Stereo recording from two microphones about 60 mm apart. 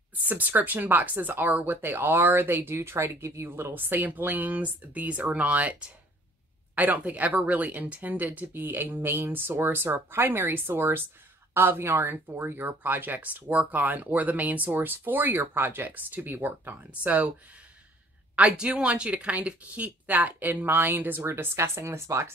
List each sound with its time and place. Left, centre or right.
0.3 s speech: right
16.9 s speech: right
18.3 s speech: centre; by 21.3 s right
21.3 s speech: right